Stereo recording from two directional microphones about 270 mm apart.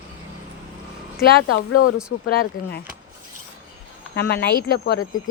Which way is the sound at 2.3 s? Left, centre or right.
Left.